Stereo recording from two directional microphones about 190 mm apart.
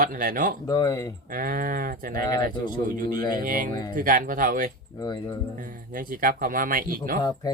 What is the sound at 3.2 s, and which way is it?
Speech, 20° left (ahead or behind).